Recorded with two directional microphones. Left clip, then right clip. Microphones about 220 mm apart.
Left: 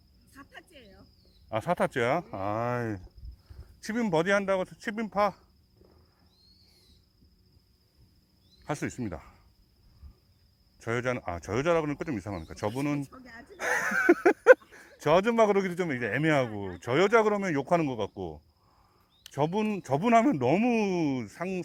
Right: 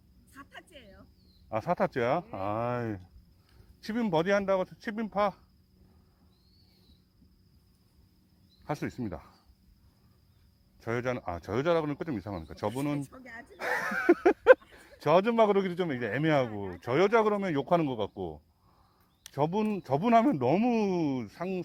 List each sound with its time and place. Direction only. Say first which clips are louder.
0.3 s cricket: right 1 dB; centre (ahead or behind)
1.5 s speech: left 1 dB; 25° left (ahead or behind)
8.6 s speech: left 1 dB; 25° left (ahead or behind)
10.8 s speech: left 2 dB; 25° left (ahead or behind)
13.1 s speech: right 2 dB; centre (ahead or behind)
13.6 s a sound: left 4 dB; 25° left (ahead or behind)
14.7 s a man's voice: left 1 dB; 20° left (ahead or behind)
16.8 s speech: left 2 dB; 25° left (ahead or behind)